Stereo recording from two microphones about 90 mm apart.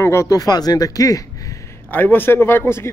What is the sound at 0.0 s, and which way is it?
A man's voice, 30° left (ahead or behind).